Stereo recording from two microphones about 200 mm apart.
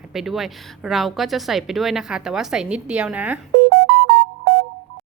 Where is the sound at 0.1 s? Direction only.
Centre (ahead or behind).